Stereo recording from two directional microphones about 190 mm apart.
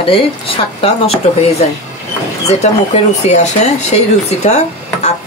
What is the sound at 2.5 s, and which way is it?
Speech, 35° left (ahead or behind).